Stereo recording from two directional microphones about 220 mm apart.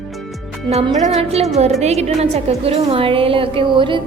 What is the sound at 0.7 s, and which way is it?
A woman's voice, 30° right (ahead or behind).